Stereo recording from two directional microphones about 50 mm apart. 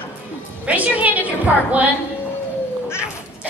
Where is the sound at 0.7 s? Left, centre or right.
Right.